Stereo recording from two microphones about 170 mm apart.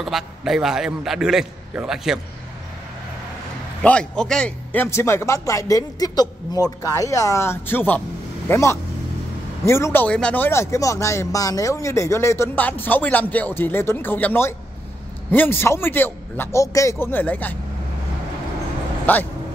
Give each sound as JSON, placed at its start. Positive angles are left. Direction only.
{"t": 0.0, "sound": "a man's voice", "side_deg": 0}
{"t": 3.8, "sound": "a man's voice", "side_deg": 5}
{"t": 19.1, "sound": "speech", "side_deg": 10}